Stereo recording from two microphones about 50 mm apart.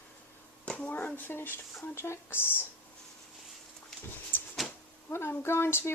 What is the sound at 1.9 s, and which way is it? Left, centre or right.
Speech, left.